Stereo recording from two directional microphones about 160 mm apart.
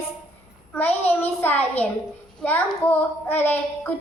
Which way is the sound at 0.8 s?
10° left (ahead or behind).